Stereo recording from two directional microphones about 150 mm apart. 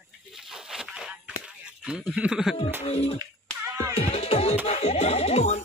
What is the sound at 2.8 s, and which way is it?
Music, 40° left (ahead or behind).